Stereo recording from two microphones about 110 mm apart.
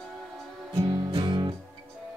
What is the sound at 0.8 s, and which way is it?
Music, 40° right (ahead or behind).